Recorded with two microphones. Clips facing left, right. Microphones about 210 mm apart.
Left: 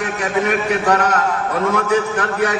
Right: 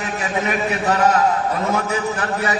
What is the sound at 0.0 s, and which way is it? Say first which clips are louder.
A man's voice: left 4 dB; 65° left (ahead or behind).